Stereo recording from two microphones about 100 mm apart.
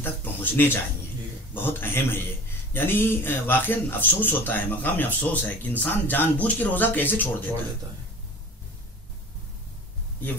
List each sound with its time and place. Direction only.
0.0 s speech: 20° left (ahead or behind)